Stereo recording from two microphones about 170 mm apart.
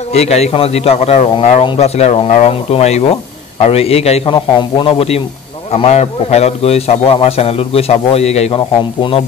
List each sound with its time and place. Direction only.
0.1 s a man's voice: 40° left (ahead or behind)